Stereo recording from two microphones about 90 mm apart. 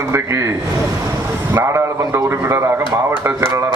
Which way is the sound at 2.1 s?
30° right (ahead or behind).